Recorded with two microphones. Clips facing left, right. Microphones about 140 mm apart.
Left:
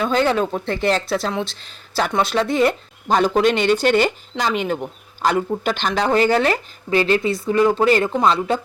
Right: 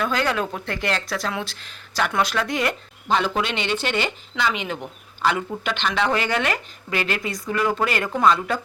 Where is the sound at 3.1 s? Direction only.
45° left (ahead or behind).